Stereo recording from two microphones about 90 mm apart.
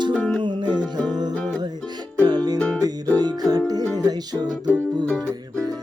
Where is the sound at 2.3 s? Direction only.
45° right (ahead or behind).